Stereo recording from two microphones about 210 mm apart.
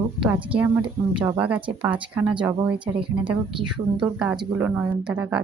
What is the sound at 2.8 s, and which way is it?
Speech, 25° right (ahead or behind).